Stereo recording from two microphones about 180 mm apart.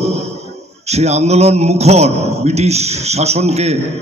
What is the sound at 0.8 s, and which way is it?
A man's voice, 35° right (ahead or behind).